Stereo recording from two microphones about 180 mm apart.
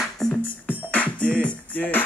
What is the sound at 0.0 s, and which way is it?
Music, 5° left (ahead or behind).